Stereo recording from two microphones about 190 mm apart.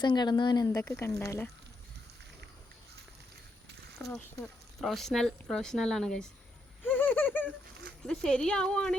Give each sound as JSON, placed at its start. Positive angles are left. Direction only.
{"t": 0.0, "sound": "speech", "side_deg": 25}
{"t": 0.7, "sound": "speech", "side_deg": 10}
{"t": 3.9, "sound": "a sound", "side_deg": 0}
{"t": 4.8, "sound": "speech", "side_deg": 0}
{"t": 6.8, "sound": "a sound", "side_deg": 10}
{"t": 8.0, "sound": "speech", "side_deg": 5}